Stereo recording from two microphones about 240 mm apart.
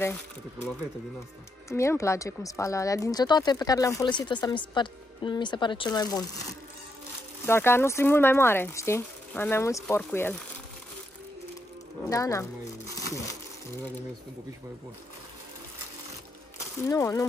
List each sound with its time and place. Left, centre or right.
1.7 s speech: centre
7.4 s speech: centre
12.1 s a sound: centre
16.5 s speech: centre